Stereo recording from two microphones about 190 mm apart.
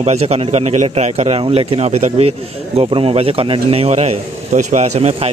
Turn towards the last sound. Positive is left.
turn(degrees=-35)  # may be behind; listen again after turning